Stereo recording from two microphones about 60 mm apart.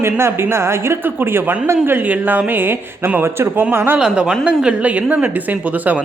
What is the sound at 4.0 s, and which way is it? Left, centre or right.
Speech, centre.